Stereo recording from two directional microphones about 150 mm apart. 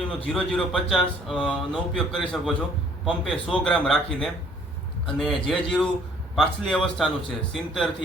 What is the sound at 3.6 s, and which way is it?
Speech, centre (ahead or behind).